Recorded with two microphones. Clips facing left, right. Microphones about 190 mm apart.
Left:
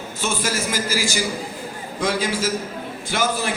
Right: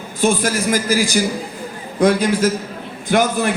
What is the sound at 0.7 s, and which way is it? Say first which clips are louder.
A man's voice: right 7 dB; 50° right (ahead or behind).